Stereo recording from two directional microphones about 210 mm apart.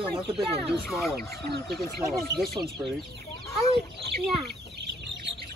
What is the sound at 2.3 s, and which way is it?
Speech, centre (ahead or behind).